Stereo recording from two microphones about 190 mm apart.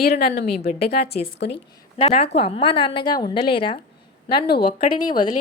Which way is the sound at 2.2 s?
30° left (ahead or behind).